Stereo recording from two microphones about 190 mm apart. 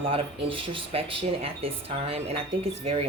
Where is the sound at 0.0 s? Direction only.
30° right (ahead or behind).